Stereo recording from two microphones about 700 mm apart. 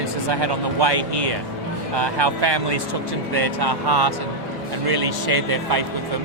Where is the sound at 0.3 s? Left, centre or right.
Right.